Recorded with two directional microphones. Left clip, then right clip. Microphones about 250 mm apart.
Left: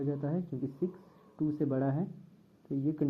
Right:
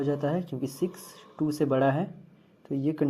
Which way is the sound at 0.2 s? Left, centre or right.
Right.